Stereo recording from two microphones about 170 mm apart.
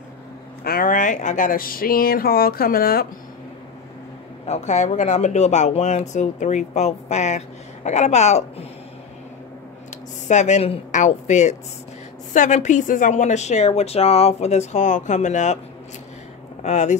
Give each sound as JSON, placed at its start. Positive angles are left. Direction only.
{"t": 0.7, "sound": "speech", "side_deg": 55}
{"t": 4.5, "sound": "speech", "side_deg": 45}
{"t": 10.2, "sound": "speech", "side_deg": 45}
{"t": 16.6, "sound": "speech", "side_deg": 45}